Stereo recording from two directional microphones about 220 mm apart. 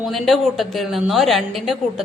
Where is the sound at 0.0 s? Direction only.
Centre (ahead or behind).